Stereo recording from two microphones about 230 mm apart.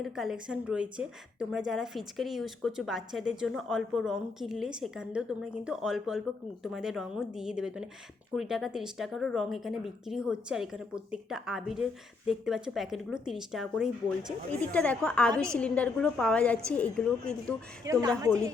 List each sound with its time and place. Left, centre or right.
0.0 s a woman's voice: centre
17.8 s a woman's voice: centre